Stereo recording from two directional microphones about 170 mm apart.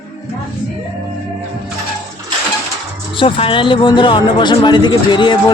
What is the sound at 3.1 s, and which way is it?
Speech, 30° left (ahead or behind).